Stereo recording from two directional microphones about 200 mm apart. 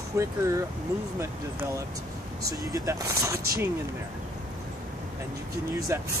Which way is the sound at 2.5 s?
15° right (ahead or behind).